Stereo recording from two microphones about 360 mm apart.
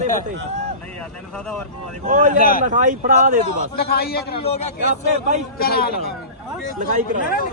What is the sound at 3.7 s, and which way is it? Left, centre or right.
A man's voice, left.